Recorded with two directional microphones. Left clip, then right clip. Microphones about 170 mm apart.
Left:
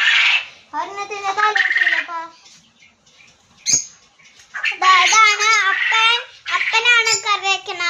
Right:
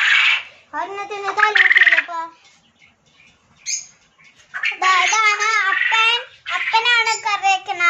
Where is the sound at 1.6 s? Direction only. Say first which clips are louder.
Right 8 dB; 50° right (ahead or behind).